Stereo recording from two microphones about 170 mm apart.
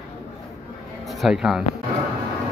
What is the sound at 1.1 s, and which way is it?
Speech, centre (ahead or behind).